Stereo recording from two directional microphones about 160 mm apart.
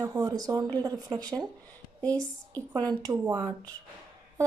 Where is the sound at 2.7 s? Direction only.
25° right (ahead or behind).